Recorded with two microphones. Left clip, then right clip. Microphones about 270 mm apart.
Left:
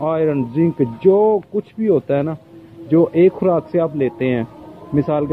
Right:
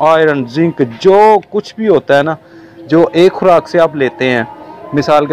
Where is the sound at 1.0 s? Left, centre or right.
Right.